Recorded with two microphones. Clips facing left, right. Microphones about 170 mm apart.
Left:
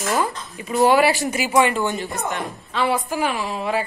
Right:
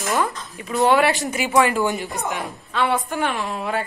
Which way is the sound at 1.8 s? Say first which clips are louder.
Right 1 dB; 15° right (ahead or behind).